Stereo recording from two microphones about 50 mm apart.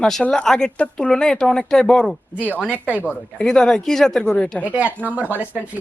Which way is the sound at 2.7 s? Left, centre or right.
Right.